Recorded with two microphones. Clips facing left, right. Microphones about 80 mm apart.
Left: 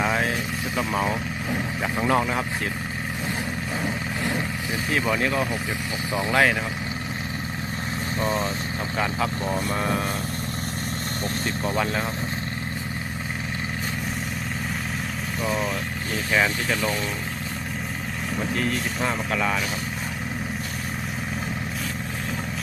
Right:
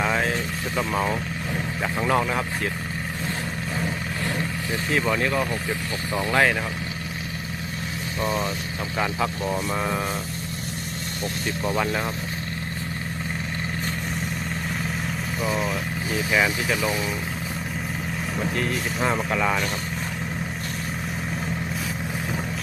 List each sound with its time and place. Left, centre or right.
0.0 s vehicle: centre
0.8 s speech: centre
3.8 s vehicle: centre
4.9 s speech: centre
6.1 s speech: centre
9.0 s speech: centre
11.4 s speech: centre
15.4 s speech: centre
18.3 s speech: centre